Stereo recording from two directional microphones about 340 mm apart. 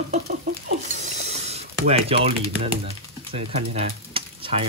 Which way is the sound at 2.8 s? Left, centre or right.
Centre.